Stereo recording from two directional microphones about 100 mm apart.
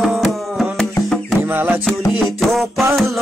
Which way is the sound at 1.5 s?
20° right (ahead or behind).